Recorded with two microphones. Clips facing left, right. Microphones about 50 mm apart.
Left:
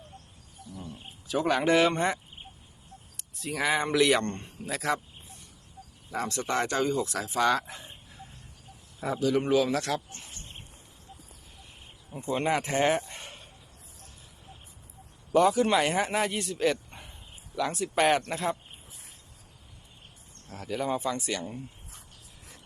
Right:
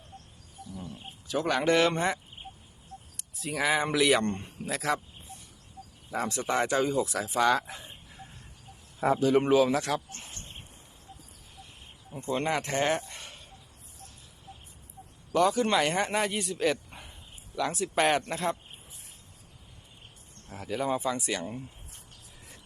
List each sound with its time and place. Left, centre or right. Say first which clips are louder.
0.7 s roaring cats: even; centre
3.2 s speech: even; centre
6.2 s speech: right 1 dB; centre
9.0 s a man's voice: right 3 dB; right
9.5 s speech: right 2 dB; centre
12.3 s speech: left 2 dB; centre
15.4 s speech: left 2 dB; centre
20.5 s speech: even; centre